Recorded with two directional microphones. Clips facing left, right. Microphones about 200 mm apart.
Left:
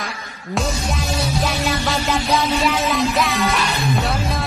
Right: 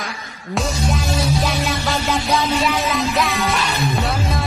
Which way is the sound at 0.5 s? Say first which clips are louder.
Right 1 dB; centre (ahead or behind).